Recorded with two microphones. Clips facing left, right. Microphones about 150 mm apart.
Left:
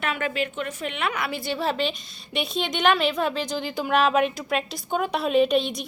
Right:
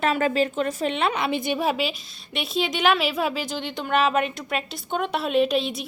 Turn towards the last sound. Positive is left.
turn(degrees=0)  # may be behind; listen again after turning